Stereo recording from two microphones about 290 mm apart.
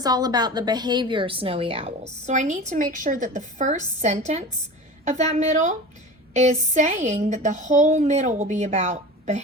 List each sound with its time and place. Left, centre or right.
0.0 s a woman's voice: centre